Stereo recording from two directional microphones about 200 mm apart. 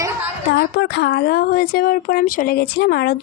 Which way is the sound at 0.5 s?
55° left (ahead or behind).